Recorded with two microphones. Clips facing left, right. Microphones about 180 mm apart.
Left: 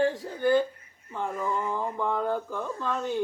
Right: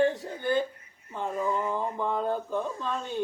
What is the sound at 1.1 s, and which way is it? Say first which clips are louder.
Speech: right 1 dB; 20° right (ahead or behind).